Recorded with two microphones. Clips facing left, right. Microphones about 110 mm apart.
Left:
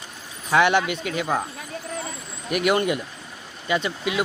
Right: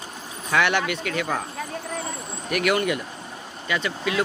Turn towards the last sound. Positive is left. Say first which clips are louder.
# left 1 dB
turn(degrees=20)  # may be behind; listen again after turning